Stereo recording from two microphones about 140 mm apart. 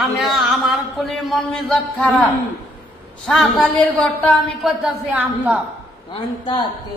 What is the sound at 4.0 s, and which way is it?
Speech, 10° left (ahead or behind).